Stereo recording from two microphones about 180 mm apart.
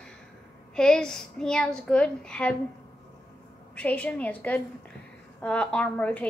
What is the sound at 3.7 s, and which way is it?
Speech, 10° left (ahead or behind).